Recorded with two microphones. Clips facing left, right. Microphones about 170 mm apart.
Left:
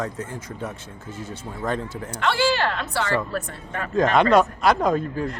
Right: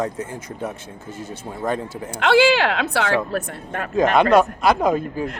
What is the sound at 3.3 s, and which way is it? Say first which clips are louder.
Speech: right 4 dB; 50° right (ahead or behind).